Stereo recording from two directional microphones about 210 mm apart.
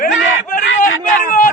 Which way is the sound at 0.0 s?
40° left (ahead or behind).